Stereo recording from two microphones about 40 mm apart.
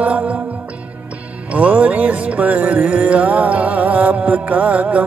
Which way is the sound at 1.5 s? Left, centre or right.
Right.